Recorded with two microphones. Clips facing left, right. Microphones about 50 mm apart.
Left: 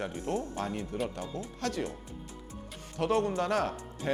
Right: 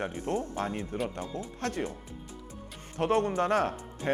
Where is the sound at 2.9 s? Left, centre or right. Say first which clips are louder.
Right 2 dB; right.